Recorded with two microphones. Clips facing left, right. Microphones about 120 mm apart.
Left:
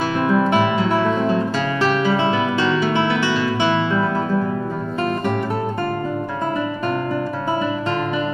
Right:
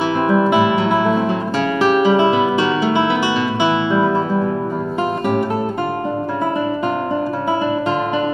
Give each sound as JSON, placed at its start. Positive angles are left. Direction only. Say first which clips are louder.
{"t": 0.2, "sound": "music", "louder": "right 2 dB", "side_deg": -15}